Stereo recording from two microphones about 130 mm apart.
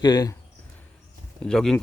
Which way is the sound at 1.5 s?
5° left (ahead or behind).